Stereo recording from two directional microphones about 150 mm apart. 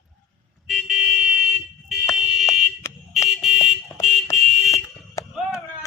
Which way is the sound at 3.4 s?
Centre (ahead or behind).